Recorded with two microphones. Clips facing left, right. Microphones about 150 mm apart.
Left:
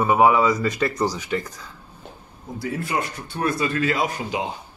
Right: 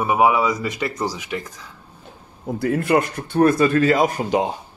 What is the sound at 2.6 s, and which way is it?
Speech, 55° right (ahead or behind).